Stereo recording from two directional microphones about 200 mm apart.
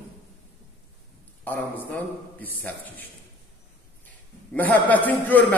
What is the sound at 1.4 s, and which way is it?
A man's voice, 10° left (ahead or behind).